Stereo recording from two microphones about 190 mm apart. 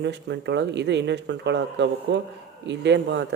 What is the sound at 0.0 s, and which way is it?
Speech, 65° right (ahead or behind).